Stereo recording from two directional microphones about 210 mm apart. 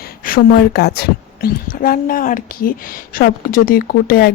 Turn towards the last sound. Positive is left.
turn(degrees=45)  # may be behind; listen again after turning